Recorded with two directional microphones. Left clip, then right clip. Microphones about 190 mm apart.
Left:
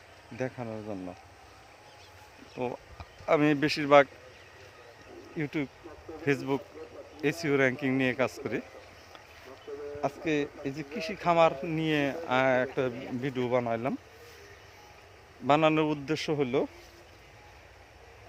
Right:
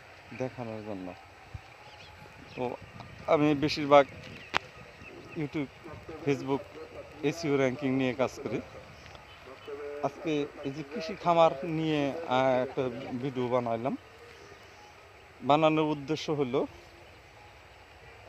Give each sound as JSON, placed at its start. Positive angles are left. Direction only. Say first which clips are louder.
{"t": 0.3, "sound": "speech", "louder": "left 1 dB", "side_deg": 5}
{"t": 2.7, "sound": "a sound", "louder": "right 1 dB", "side_deg": 0}
{"t": 3.7, "sound": "speech", "louder": "even", "side_deg": 0}
{"t": 5.4, "sound": "speech", "louder": "left 2 dB", "side_deg": 0}
{"t": 9.7, "sound": "a sound", "louder": "even", "side_deg": 40}
{"t": 10.2, "sound": "speech", "louder": "left 2 dB", "side_deg": 5}
{"t": 15.4, "sound": "speech", "louder": "even", "side_deg": -5}